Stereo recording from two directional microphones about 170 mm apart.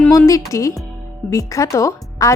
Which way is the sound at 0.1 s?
20° left (ahead or behind).